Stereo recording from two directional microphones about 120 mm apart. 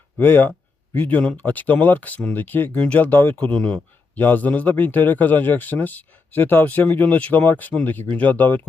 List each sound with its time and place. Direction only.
0.2 s a man's voice: 15° left (ahead or behind)